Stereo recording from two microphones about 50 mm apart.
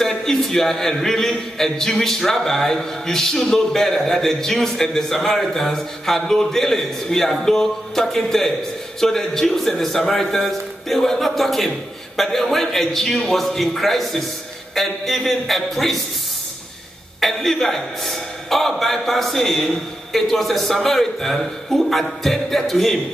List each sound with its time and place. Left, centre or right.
0.0 s a man's voice: centre
17.2 s a man's voice: centre